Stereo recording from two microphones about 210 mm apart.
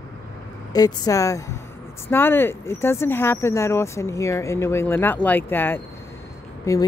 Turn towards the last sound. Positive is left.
turn(degrees=15)  # may be behind; listen again after turning